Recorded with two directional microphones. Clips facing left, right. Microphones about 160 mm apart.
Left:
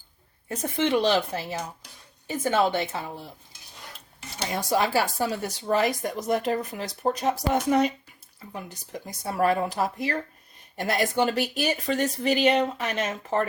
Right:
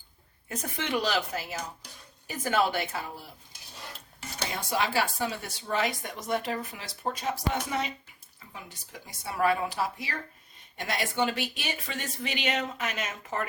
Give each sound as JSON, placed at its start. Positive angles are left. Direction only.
{"t": 0.4, "sound": "speech", "side_deg": 25}
{"t": 4.7, "sound": "speech", "side_deg": 40}